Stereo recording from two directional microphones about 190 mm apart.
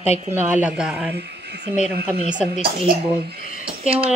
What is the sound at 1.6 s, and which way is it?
Speech, 35° left (ahead or behind).